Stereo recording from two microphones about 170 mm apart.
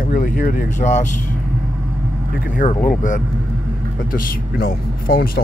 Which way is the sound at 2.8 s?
50° left (ahead or behind).